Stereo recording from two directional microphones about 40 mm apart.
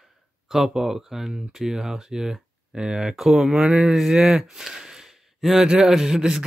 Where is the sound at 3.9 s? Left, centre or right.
Centre.